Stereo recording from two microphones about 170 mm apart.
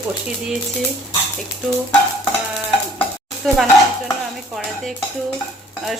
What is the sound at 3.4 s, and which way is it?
Speech, centre (ahead or behind).